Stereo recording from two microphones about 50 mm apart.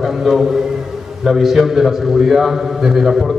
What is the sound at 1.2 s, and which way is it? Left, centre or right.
A man's voice, centre.